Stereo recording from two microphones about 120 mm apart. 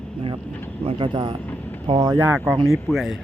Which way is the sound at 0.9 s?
40° right (ahead or behind).